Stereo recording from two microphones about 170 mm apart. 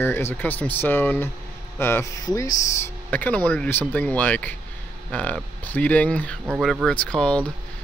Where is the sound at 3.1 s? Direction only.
10° left (ahead or behind).